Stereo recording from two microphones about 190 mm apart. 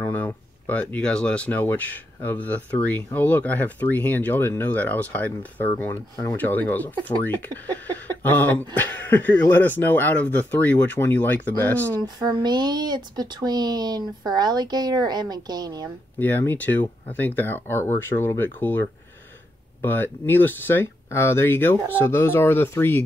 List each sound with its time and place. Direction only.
0.0 s speech: 10° left (ahead or behind)
12.0 s speech: 25° right (ahead or behind)
16.2 s speech: 10° left (ahead or behind)